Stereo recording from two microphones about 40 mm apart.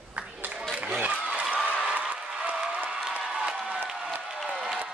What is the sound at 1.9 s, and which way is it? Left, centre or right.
Applause, right.